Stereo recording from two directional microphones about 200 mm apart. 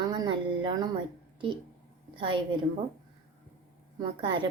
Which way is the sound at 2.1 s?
25° right (ahead or behind).